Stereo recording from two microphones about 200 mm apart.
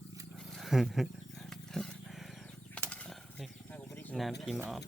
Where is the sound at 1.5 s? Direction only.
5° left (ahead or behind).